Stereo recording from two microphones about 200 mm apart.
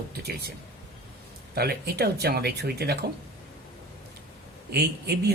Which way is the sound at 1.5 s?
50° right (ahead or behind).